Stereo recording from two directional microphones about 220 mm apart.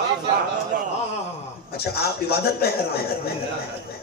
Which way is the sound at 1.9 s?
45° left (ahead or behind).